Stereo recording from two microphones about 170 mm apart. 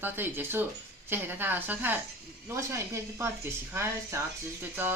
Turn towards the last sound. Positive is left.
turn(degrees=-10)  # may be behind; listen again after turning